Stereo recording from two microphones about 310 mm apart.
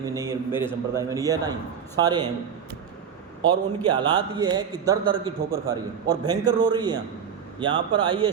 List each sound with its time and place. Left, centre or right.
0.0 s a man's voice: centre
3.8 s a man's voice: centre